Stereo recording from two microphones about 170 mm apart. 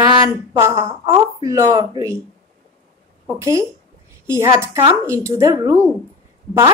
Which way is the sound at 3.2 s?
15° right (ahead or behind).